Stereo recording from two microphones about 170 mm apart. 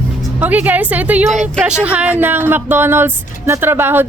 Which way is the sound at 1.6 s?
10° right (ahead or behind).